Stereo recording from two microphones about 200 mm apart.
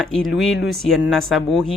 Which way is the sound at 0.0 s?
Centre (ahead or behind).